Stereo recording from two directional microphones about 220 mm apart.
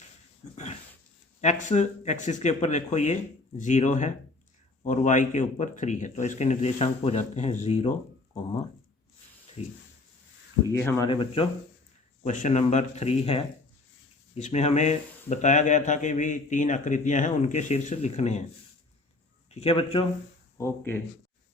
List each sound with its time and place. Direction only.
0.5 s dog: 30° left (ahead or behind)
1.4 s speech: 35° left (ahead or behind)
9.6 s a man's voice: 30° left (ahead or behind)
10.7 s speech: 10° left (ahead or behind); by 18.4 s 30° left (ahead or behind)
19.5 s a man's voice: 25° left (ahead or behind)
20.6 s speech: 10° left (ahead or behind)